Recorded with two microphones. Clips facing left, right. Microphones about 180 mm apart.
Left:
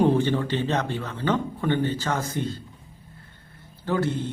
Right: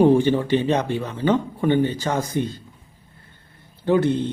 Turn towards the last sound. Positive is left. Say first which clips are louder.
# right 7 dB
turn(degrees=-20)  # may be behind; listen again after turning